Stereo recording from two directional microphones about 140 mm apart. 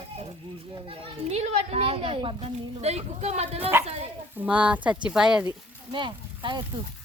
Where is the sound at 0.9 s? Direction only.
45° right (ahead or behind).